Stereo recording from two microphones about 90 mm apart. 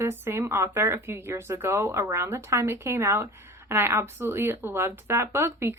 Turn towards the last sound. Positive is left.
turn(degrees=-25)  # may be behind; listen again after turning